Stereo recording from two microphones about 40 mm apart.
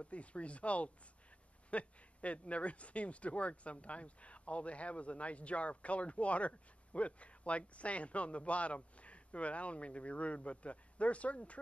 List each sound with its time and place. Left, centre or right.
0.0 s speech: left